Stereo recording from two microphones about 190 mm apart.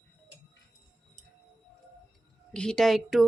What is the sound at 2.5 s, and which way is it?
Speech, 5° left (ahead or behind).